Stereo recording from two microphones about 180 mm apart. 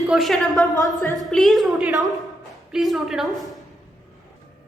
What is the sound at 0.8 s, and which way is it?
Speech, 15° left (ahead or behind).